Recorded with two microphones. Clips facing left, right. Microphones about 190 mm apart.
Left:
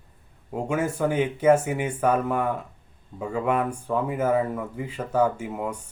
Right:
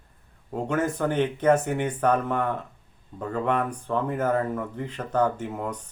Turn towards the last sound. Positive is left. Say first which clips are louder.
# left 1 dB
turn(degrees=10)  # may be behind; listen again after turning